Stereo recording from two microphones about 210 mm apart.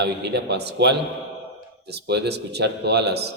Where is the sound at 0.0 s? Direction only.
55° right (ahead or behind).